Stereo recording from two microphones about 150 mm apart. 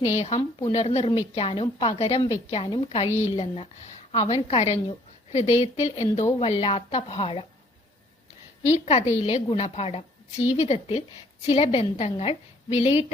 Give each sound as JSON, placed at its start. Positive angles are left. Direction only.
{"t": 0.2, "sound": "a woman's voice", "side_deg": 45}
{"t": 8.8, "sound": "a woman's voice", "side_deg": 45}